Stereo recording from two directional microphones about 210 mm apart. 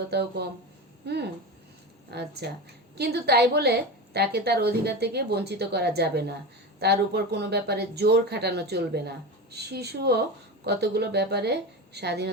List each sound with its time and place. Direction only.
0.1 s speech: 50° right (ahead or behind)